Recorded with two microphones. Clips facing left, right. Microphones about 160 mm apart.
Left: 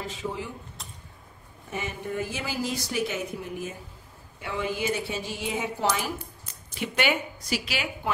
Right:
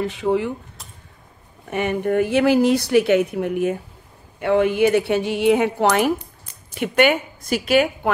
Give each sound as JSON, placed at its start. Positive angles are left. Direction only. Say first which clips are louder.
{"t": 0.0, "sound": "speech", "louder": "right 13 dB", "side_deg": -65}
{"t": 1.7, "sound": "a woman's voice", "louder": "right 12 dB", "side_deg": -65}